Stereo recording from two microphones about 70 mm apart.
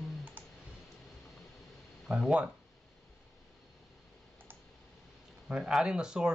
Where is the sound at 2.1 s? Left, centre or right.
Centre.